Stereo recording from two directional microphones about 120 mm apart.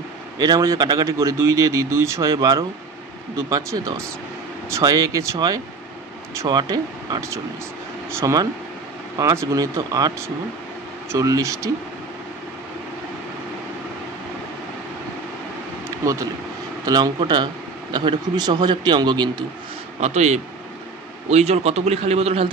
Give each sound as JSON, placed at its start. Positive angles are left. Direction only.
{"t": 0.4, "sound": "a man's voice", "side_deg": -30}
{"t": 7.2, "sound": "a man's voice", "side_deg": -25}
{"t": 16.8, "sound": "a man's voice", "side_deg": -35}
{"t": 20.0, "sound": "a man's voice", "side_deg": -70}